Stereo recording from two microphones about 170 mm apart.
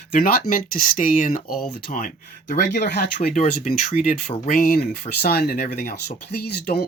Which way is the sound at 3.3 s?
50° left (ahead or behind).